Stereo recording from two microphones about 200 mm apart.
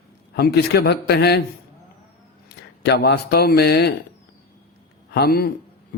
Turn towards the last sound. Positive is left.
turn(degrees=50)  # may be behind; listen again after turning